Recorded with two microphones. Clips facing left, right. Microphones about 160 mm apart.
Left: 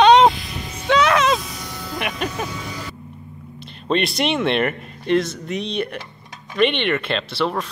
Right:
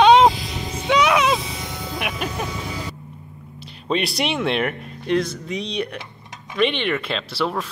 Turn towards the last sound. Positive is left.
turn(degrees=-5)  # may be behind; listen again after turning